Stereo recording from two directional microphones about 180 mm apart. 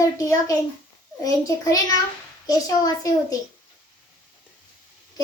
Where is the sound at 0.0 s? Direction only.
20° left (ahead or behind).